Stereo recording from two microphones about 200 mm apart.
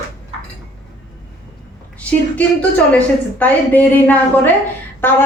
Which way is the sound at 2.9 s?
10° left (ahead or behind).